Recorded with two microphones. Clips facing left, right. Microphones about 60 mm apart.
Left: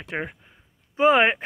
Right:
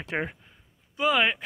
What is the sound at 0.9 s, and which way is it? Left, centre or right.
Speech, left.